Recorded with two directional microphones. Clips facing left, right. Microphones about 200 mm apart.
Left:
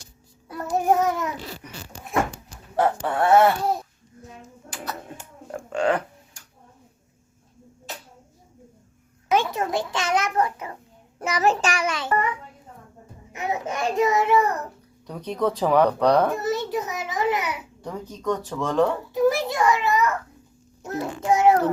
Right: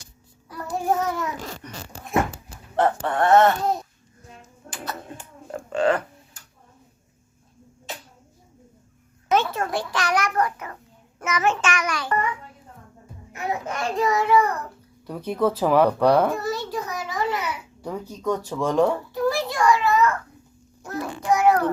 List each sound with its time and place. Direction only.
0.4 s child singing: 20° left (ahead or behind)
1.6 s speech: 10° left (ahead or behind)
4.7 s a sound: centre (ahead or behind)
5.5 s a sound: 10° left (ahead or behind)
9.3 s a sound: 15° left (ahead or behind)
11.2 s a child's voice: 35° left (ahead or behind)
13.3 s a child's voice: 20° left (ahead or behind)
15.0 s speech: 5° right (ahead or behind)
16.3 s babbling: 20° left (ahead or behind)
17.8 s speech: 10° right (ahead or behind)
19.1 s a sound: 20° left (ahead or behind)
20.8 s child singing: 25° left (ahead or behind)